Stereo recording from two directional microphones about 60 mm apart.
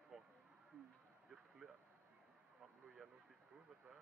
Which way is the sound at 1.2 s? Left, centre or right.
Centre.